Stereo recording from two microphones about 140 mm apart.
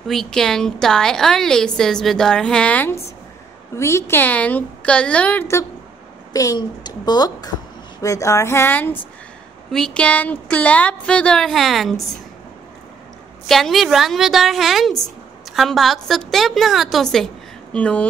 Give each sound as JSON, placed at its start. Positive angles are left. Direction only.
{"t": 0.0, "sound": "a woman's voice", "side_deg": 0}
{"t": 6.3, "sound": "a child's voice", "side_deg": 25}
{"t": 9.7, "sound": "a woman's voice", "side_deg": 5}
{"t": 13.5, "sound": "a woman's voice", "side_deg": 0}